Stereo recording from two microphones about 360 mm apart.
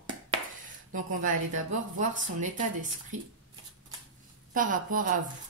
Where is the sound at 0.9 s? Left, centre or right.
Right.